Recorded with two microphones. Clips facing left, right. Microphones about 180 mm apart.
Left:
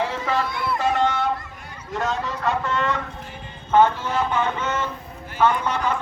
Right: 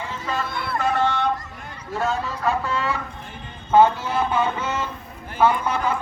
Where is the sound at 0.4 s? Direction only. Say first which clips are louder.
Left 2 dB; 60° right (ahead or behind).